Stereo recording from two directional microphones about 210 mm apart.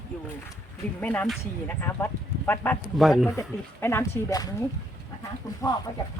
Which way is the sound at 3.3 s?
10° left (ahead or behind).